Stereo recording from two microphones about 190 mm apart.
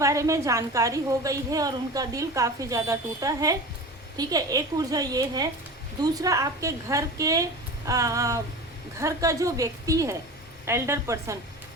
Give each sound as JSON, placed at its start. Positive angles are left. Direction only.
{"t": 0.0, "sound": "a woman's voice", "side_deg": -15}